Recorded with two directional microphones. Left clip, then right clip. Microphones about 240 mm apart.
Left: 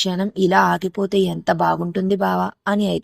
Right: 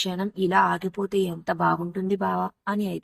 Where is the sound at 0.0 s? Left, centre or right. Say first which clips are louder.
Left 7 dB; left.